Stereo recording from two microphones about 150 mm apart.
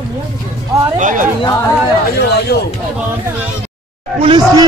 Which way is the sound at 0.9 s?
60° right (ahead or behind).